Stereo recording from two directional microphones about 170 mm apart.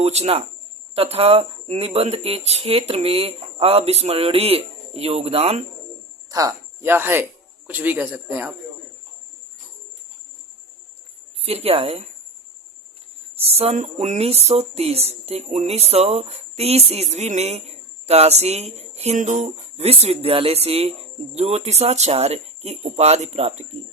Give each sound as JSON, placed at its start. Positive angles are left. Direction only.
{"t": 0.0, "sound": "speech", "side_deg": -40}
{"t": 6.3, "sound": "speech", "side_deg": -15}
{"t": 11.3, "sound": "speech", "side_deg": -35}
{"t": 13.3, "sound": "speech", "side_deg": -35}